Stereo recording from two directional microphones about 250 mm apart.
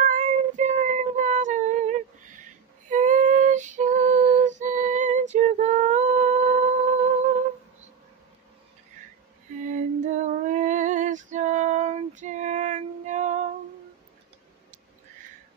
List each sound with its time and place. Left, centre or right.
0.0 s child singing: right
2.9 s female singing: right
9.6 s female singing: right